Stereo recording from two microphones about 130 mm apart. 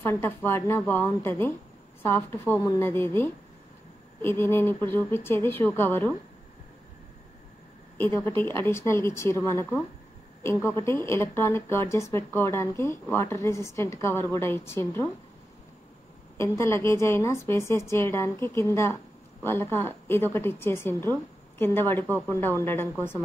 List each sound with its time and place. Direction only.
0.0 s speech: 15° left (ahead or behind)
8.0 s a woman's voice: 20° left (ahead or behind)
16.3 s a woman's voice: 20° left (ahead or behind)